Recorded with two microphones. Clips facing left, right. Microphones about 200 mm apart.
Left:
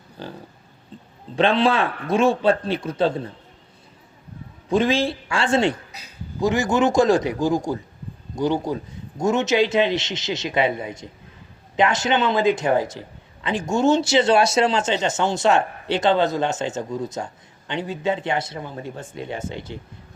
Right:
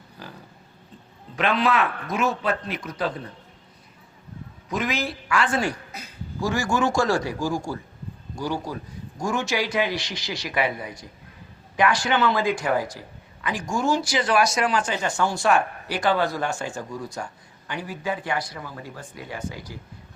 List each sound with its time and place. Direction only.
0.2 s speech: 30° left (ahead or behind)
1.4 s speech: 30° left (ahead or behind)
4.7 s speech: 30° left (ahead or behind)